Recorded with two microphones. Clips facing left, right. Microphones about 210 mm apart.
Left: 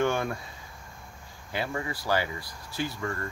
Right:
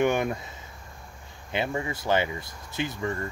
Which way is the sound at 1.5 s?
20° right (ahead or behind).